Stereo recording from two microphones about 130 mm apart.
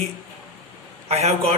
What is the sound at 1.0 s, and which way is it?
Speech, 55° right (ahead or behind).